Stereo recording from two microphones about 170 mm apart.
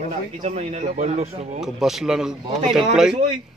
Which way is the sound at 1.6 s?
Centre (ahead or behind).